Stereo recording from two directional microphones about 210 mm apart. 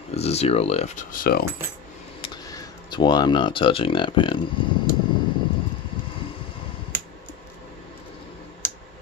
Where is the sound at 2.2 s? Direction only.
15° left (ahead or behind).